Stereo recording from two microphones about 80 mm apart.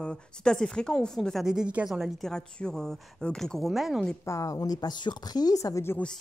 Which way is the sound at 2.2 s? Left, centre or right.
Centre.